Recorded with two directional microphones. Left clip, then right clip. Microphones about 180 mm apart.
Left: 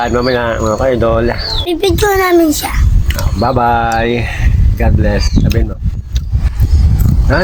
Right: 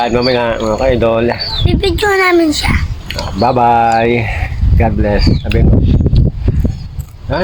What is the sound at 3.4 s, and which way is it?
Speech, 15° right (ahead or behind).